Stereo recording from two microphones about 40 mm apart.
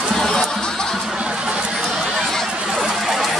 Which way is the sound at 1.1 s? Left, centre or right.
Right.